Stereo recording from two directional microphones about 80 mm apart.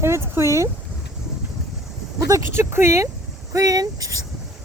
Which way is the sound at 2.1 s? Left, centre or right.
Right.